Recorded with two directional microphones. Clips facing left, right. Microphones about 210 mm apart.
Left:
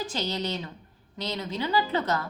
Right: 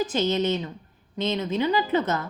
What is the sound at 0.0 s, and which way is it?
A woman's voice, 20° right (ahead or behind).